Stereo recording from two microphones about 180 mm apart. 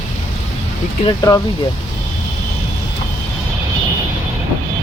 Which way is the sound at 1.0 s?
20° left (ahead or behind).